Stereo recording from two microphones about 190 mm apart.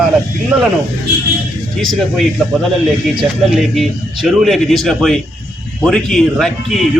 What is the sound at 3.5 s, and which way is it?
Speech, centre (ahead or behind).